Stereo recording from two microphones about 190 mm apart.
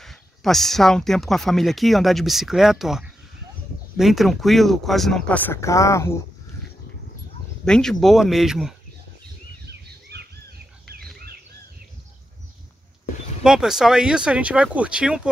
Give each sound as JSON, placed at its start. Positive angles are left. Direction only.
{"t": 0.0, "sound": "speech", "side_deg": 0}
{"t": 7.6, "sound": "speech", "side_deg": 5}
{"t": 9.7, "sound": "bird", "side_deg": -60}
{"t": 13.4, "sound": "speech", "side_deg": -5}